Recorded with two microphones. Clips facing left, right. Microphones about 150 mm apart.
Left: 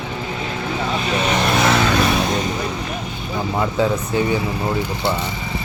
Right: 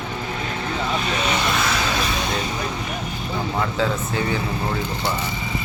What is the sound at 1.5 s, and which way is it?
Vehicle, 60° left (ahead or behind).